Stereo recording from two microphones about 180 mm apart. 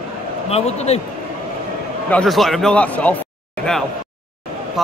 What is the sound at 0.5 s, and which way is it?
Speech, 35° left (ahead or behind).